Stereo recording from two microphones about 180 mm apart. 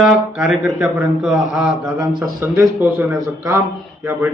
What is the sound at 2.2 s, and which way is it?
A man's voice, 15° right (ahead or behind).